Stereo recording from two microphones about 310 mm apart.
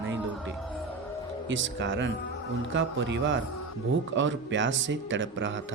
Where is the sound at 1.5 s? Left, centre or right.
Right.